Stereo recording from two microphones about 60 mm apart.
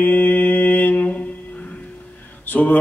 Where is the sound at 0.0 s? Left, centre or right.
Left.